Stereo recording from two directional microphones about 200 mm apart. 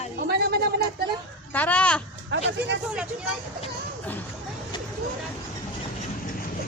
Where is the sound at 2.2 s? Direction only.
60° right (ahead or behind).